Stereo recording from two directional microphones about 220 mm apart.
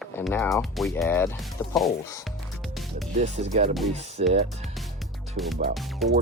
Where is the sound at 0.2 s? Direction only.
10° left (ahead or behind).